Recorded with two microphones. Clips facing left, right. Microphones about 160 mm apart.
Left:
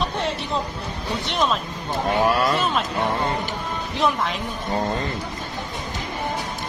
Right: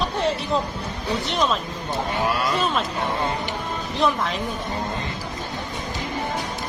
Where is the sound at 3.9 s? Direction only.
Centre (ahead or behind).